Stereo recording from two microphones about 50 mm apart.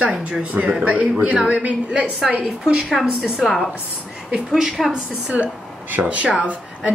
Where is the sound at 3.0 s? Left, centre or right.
Centre.